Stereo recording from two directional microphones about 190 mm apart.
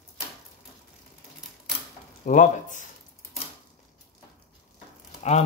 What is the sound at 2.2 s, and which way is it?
Speech, 40° left (ahead or behind).